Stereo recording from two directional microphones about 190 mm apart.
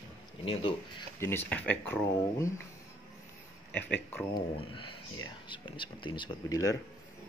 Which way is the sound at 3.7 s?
10° left (ahead or behind).